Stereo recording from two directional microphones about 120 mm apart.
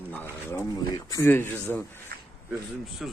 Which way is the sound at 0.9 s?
30° left (ahead or behind).